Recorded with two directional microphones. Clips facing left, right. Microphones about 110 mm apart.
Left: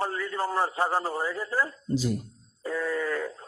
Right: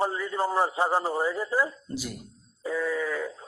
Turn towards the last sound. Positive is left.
turn(degrees=-5)  # may be behind; listen again after turning